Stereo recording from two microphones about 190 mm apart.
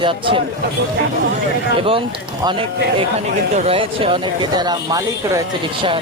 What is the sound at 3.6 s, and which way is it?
Speech, 30° right (ahead or behind).